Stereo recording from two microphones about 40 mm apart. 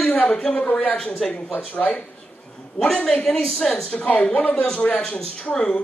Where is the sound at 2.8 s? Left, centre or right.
Left.